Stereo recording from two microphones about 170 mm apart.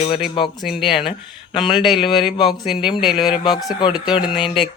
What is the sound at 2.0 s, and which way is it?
Speech, 30° left (ahead or behind).